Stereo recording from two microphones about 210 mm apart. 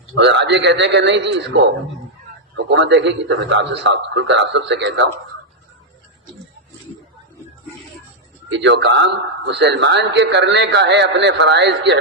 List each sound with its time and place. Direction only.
0.1 s a man's voice: 60° right (ahead or behind)
2.6 s a man's voice: 55° right (ahead or behind)
8.4 s a man's voice: 60° right (ahead or behind)